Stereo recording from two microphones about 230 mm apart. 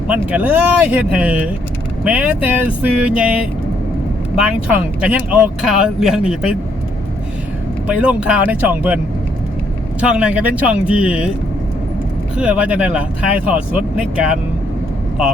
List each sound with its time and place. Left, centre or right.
0.1 s speech: centre
7.9 s speech: centre
10.0 s speech: centre
12.4 s speech: centre